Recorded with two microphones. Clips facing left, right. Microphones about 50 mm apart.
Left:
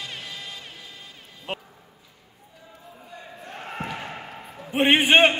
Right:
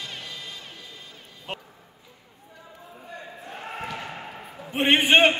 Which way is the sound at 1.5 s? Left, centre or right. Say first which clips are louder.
Left 3 dB; centre.